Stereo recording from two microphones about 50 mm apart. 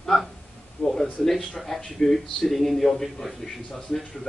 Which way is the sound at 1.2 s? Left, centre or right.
Centre.